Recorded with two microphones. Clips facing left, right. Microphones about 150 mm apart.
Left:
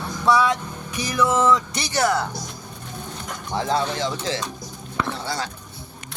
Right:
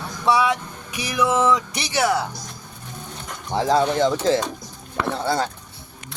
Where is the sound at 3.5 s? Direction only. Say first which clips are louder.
Right 4 dB; 35° right (ahead or behind); by 5.5 s 55° right (ahead or behind).